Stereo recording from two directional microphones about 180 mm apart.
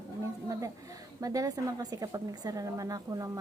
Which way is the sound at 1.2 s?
20° right (ahead or behind).